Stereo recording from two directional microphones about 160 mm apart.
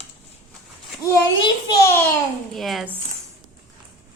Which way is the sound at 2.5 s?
Centre (ahead or behind).